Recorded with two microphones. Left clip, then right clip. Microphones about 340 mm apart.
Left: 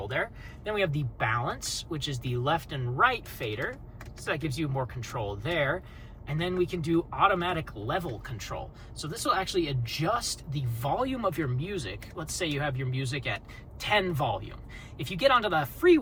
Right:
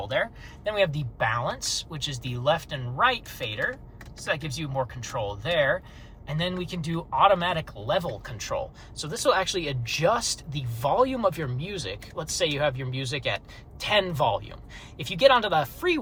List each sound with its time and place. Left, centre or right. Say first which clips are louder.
0.6 s speech: right 4 dB; centre